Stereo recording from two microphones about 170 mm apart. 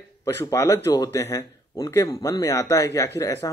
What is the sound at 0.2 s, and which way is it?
Speech, 15° left (ahead or behind).